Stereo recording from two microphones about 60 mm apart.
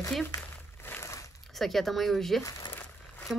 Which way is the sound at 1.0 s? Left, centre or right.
Left.